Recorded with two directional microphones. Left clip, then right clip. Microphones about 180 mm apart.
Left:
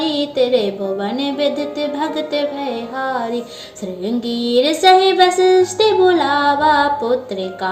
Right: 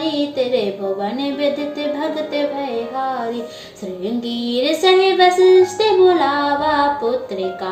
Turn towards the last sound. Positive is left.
turn(degrees=30)  # may be behind; listen again after turning